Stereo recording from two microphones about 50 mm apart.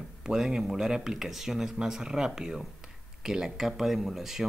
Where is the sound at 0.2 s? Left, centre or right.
Centre.